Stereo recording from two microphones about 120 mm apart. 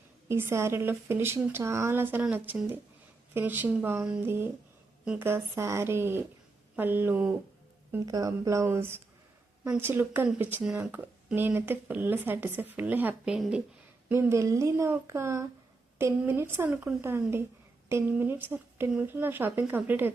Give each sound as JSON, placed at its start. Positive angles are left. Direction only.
{"t": 0.3, "sound": "a woman's voice", "side_deg": -20}
{"t": 5.0, "sound": "a woman's voice", "side_deg": -15}
{"t": 8.0, "sound": "a woman's voice", "side_deg": -30}
{"t": 14.1, "sound": "a woman's voice", "side_deg": -20}